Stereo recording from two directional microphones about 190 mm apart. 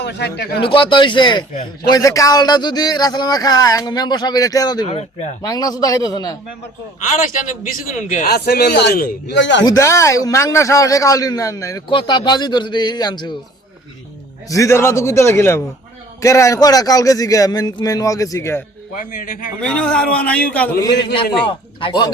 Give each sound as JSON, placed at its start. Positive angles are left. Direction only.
{"t": 0.0, "sound": "speech", "side_deg": 60}
{"t": 0.6, "sound": "a man's voice", "side_deg": 25}
{"t": 4.9, "sound": "a man's voice", "side_deg": 35}
{"t": 5.4, "sound": "a man's voice", "side_deg": 20}
{"t": 7.8, "sound": "a man's voice", "side_deg": 45}
{"t": 9.6, "sound": "a man's voice", "side_deg": 15}
{"t": 14.4, "sound": "a man's voice", "side_deg": 15}
{"t": 18.9, "sound": "a man's voice", "side_deg": 45}
{"t": 19.6, "sound": "a man's voice", "side_deg": 5}
{"t": 21.4, "sound": "a man's voice", "side_deg": 25}